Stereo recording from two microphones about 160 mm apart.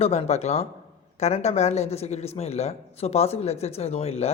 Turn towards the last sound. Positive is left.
turn(degrees=40)  # may be behind; listen again after turning